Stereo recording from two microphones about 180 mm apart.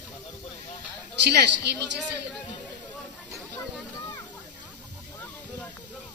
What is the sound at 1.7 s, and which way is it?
Speech, 65° right (ahead or behind).